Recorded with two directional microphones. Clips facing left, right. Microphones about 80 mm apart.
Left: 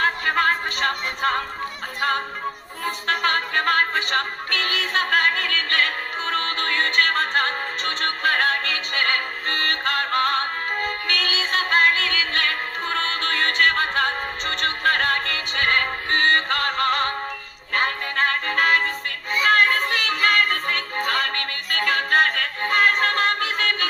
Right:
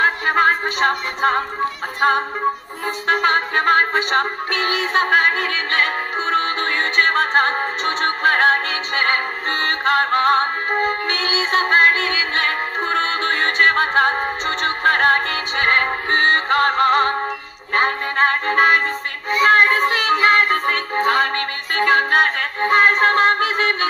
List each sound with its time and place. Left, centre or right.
0.0 s music: right